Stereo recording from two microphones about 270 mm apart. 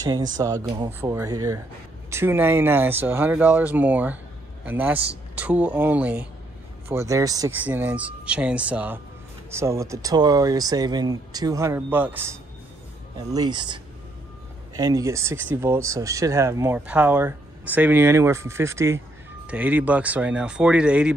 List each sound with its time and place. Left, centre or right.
0.0 s speech: centre
13.3 s speech: centre